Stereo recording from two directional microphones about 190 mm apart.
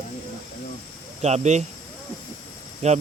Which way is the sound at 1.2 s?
35° right (ahead or behind).